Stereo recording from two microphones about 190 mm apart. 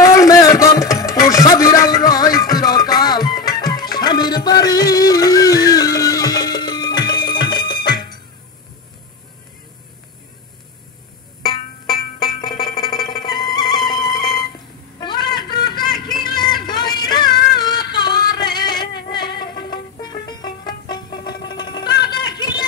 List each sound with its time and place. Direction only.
0.0 s music: 15° left (ahead or behind)
12.4 s music: 25° left (ahead or behind)
15.0 s a sound: 25° left (ahead or behind)